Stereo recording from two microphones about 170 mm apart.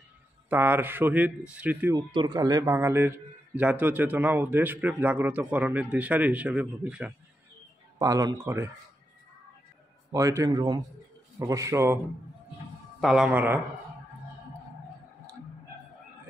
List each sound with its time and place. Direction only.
0.5 s a man's voice: 10° right (ahead or behind)
2.0 s a man's voice: 25° right (ahead or behind); by 7.2 s 5° right (ahead or behind)
8.0 s speech: 20° right (ahead or behind)
10.1 s speech: 20° right (ahead or behind)
13.0 s a man's voice: 5° right (ahead or behind)